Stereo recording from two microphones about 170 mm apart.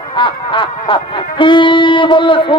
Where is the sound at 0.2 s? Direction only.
30° left (ahead or behind).